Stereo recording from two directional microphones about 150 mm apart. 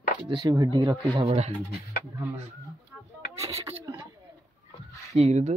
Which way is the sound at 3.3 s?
20° right (ahead or behind).